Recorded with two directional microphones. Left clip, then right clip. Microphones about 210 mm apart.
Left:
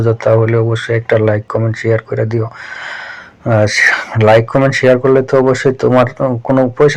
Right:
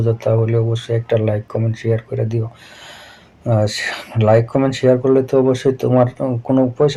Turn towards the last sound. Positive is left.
turn(degrees=30)  # may be behind; listen again after turning